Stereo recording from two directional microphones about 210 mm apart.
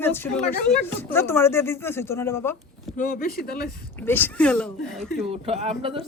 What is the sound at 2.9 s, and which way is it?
Speech, 40° left (ahead or behind).